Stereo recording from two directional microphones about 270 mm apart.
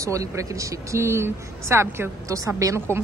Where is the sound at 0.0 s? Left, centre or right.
Centre.